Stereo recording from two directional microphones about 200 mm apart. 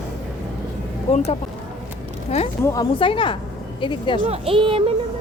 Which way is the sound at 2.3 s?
30° left (ahead or behind).